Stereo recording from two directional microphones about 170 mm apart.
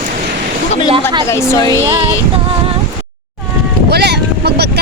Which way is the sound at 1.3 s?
15° left (ahead or behind).